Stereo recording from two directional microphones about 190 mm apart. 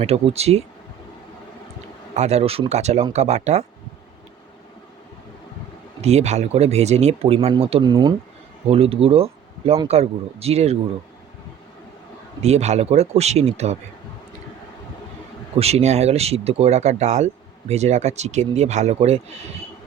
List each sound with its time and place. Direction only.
0.0 s speech: 30° right (ahead or behind)
2.1 s speech: 35° right (ahead or behind)
6.0 s speech: 35° right (ahead or behind)
12.4 s speech: 35° right (ahead or behind)
15.5 s speech: 35° right (ahead or behind)